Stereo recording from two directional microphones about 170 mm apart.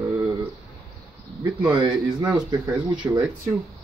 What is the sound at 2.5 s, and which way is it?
Speech, 15° right (ahead or behind).